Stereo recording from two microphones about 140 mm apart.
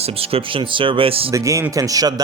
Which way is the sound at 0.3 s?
40° right (ahead or behind).